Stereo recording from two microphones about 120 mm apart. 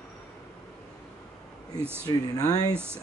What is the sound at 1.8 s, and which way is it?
Speech, 20° right (ahead or behind).